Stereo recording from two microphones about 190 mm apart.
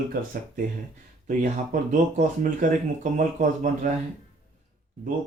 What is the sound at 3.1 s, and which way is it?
Speech, 40° right (ahead or behind).